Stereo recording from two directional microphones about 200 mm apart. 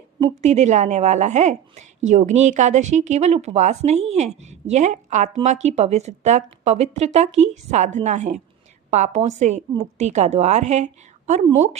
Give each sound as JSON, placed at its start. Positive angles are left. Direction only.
{"t": 0.4, "sound": "a woman's voice", "side_deg": -35}